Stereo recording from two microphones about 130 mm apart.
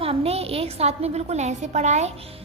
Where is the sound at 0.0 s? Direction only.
50° right (ahead or behind).